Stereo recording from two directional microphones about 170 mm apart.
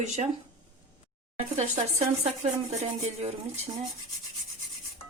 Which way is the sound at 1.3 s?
40° right (ahead or behind).